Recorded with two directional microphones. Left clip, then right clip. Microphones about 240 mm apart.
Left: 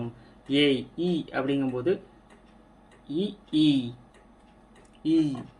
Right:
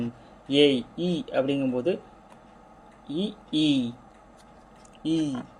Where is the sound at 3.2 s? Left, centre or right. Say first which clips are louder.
Left 1 dB; right.